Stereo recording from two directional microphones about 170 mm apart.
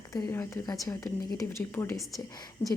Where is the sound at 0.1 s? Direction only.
15° left (ahead or behind).